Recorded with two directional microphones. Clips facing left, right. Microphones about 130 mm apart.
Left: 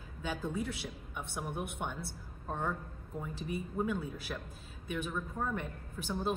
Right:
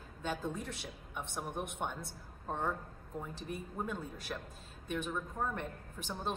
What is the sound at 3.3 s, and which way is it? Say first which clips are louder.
A woman's voice: left 8 dB; 5° left (ahead or behind).